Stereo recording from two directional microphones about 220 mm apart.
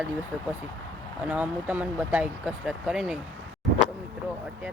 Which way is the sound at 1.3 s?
5° right (ahead or behind).